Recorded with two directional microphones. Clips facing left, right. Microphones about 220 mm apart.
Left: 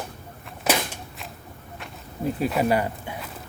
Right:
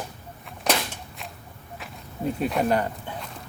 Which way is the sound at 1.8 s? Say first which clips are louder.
Left 1 dB; centre (ahead or behind).